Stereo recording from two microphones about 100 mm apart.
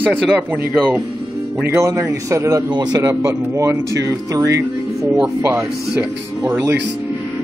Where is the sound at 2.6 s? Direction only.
45° right (ahead or behind).